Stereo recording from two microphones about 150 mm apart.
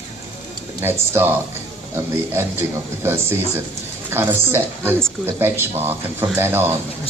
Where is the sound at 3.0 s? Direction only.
15° right (ahead or behind).